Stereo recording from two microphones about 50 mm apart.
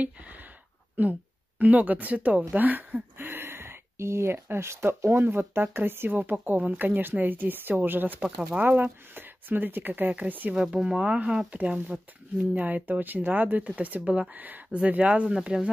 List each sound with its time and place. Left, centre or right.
0.0 s a sound: right
1.0 s speech: right
5.1 s speech: right
10.5 s speech: centre